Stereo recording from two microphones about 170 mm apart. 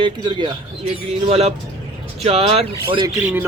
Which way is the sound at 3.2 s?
10° right (ahead or behind).